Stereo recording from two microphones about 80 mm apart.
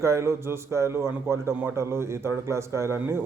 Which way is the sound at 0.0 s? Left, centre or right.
Right.